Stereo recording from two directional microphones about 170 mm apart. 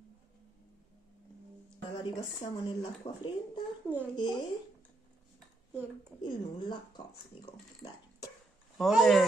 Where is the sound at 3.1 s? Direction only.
35° left (ahead or behind).